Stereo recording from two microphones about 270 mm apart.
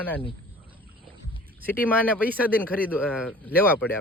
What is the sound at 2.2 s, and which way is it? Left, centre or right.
Speech, centre.